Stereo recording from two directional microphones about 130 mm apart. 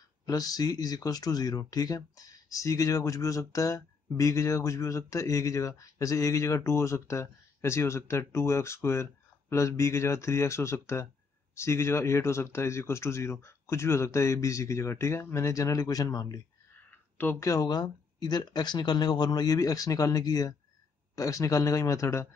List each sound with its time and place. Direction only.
0.2 s speech: 30° left (ahead or behind)
17.2 s speech: 15° left (ahead or behind)
17.5 s speech: 30° left (ahead or behind)